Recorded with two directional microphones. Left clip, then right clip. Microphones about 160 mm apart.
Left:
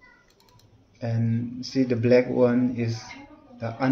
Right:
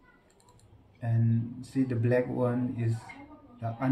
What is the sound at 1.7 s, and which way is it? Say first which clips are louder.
Speech: left 8 dB; 30° left (ahead or behind).